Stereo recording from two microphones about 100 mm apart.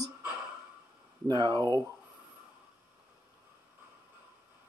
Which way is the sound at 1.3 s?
45° right (ahead or behind).